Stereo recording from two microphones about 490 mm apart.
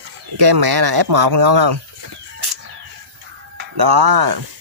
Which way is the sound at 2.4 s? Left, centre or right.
Right.